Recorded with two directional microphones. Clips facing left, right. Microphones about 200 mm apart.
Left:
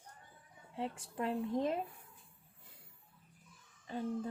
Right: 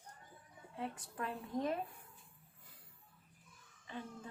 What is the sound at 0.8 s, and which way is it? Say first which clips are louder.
Speech: left 4 dB; 25° left (ahead or behind).